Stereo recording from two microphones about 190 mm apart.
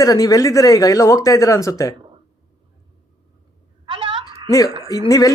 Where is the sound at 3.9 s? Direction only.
30° right (ahead or behind).